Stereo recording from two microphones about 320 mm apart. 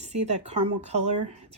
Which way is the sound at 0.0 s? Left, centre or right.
Right.